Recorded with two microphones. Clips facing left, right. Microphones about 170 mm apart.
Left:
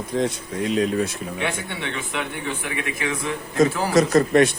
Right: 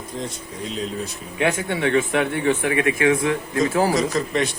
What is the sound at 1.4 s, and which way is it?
Speech, 45° right (ahead or behind).